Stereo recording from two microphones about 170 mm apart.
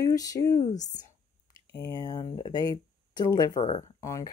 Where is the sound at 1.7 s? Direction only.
20° left (ahead or behind).